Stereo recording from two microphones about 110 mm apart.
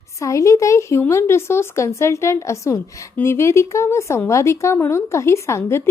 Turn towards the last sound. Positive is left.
turn(degrees=25)  # may be behind; listen again after turning